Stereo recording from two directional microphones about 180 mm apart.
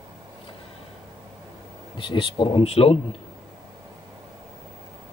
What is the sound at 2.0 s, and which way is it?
Speech, 30° left (ahead or behind).